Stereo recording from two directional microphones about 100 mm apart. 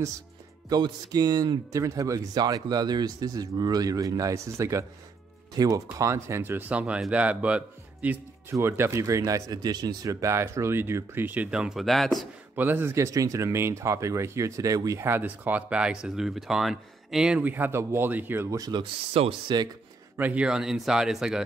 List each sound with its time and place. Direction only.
0.7 s speech: 45° right (ahead or behind)
10.2 s speech: 30° right (ahead or behind); by 12.3 s centre (ahead or behind)
12.5 s speech: 20° right (ahead or behind)
15.0 s speech: 20° right (ahead or behind)
17.4 s speech: 20° right (ahead or behind)
18.6 s speech: 50° right (ahead or behind)
20.2 s speech: 15° right (ahead or behind)